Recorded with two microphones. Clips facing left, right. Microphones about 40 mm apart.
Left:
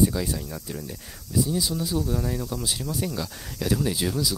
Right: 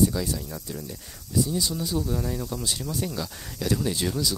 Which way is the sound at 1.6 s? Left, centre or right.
Centre.